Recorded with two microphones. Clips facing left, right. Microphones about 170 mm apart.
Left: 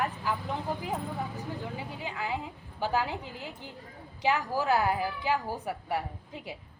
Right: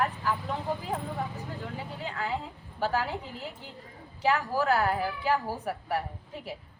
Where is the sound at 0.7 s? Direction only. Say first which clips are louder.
Right 2 dB; 15° left (ahead or behind).